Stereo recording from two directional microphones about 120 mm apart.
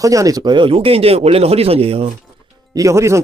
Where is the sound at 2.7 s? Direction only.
25° right (ahead or behind).